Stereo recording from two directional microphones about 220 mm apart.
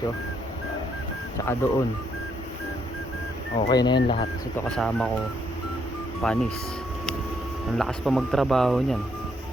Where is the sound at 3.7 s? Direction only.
20° left (ahead or behind).